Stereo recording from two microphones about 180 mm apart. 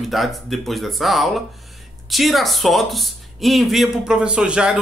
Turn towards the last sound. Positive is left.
turn(degrees=-5)  # may be behind; listen again after turning